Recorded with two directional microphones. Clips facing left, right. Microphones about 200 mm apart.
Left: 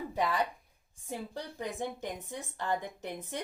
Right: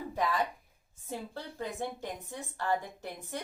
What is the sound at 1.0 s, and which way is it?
A woman's voice, 15° left (ahead or behind).